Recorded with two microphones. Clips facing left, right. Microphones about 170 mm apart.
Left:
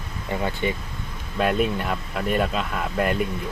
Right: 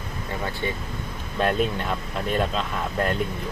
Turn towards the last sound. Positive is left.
turn(degrees=5)  # may be behind; listen again after turning